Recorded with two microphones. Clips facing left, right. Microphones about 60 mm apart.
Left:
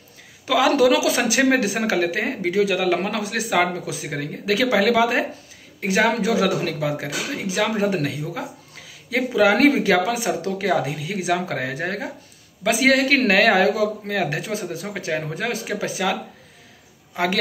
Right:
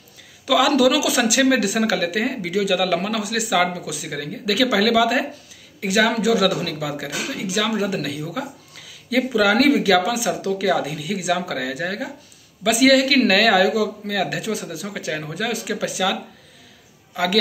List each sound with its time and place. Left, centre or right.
0.5 s a man's voice: left